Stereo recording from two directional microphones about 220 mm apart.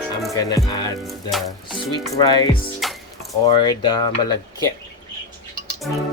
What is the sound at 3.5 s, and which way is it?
Speech, 20° left (ahead or behind).